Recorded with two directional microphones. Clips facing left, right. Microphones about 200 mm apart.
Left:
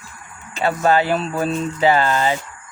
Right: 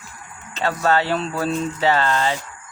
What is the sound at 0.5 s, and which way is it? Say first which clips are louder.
Speech: left 3 dB; 15° left (ahead or behind).